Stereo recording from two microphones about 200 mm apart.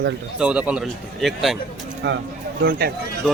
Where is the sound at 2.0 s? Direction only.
60° right (ahead or behind).